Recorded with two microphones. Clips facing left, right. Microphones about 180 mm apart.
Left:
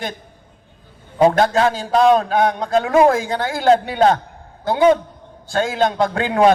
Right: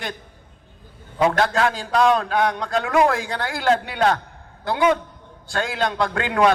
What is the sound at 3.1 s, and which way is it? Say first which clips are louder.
A man's voice: left 5 dB; 40° left (ahead or behind).